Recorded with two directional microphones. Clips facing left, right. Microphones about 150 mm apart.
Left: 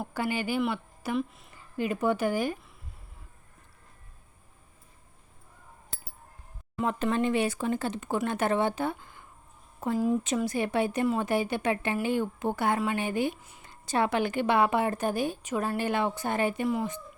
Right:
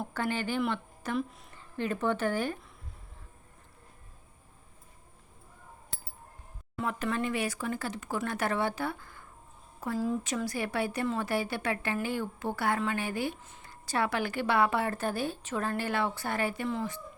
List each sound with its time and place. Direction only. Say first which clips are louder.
0.0 s speech: left 2 dB; 10° left (ahead or behind)
6.7 s speech: left 4 dB; 25° left (ahead or behind)